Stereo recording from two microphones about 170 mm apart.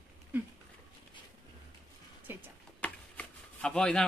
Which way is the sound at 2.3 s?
10° right (ahead or behind).